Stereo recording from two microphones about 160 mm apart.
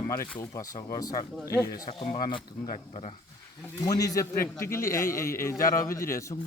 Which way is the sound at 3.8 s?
20° left (ahead or behind).